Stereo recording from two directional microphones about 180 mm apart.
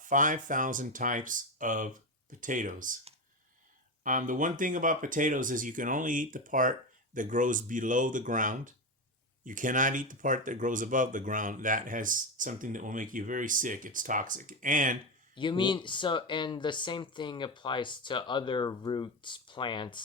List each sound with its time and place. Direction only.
0.0 s speech: 45° right (ahead or behind)
4.0 s speech: 45° right (ahead or behind)
15.4 s speech: 25° left (ahead or behind)